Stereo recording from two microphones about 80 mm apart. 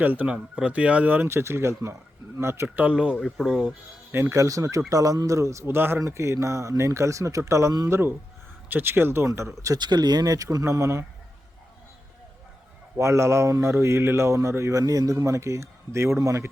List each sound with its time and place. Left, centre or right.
0.0 s a man's voice: right
2.6 s speech: centre
3.2 s speech: centre
4.1 s a man's voice: right
5.6 s a man's voice: right
7.9 s a man's voice: right
9.7 s speech: right
13.0 s a man's voice: right